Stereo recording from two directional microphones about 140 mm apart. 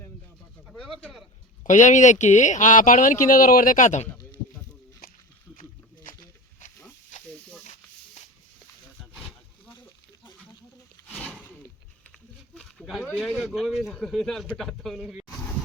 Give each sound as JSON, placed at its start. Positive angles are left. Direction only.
{"t": 0.7, "sound": "bird", "side_deg": 5}
{"t": 1.6, "sound": "speech", "side_deg": 60}
{"t": 5.5, "sound": "a sound", "side_deg": 75}
{"t": 11.1, "sound": "a sound", "side_deg": 5}
{"t": 12.5, "sound": "snake", "side_deg": 0}
{"t": 13.1, "sound": "speech", "side_deg": -5}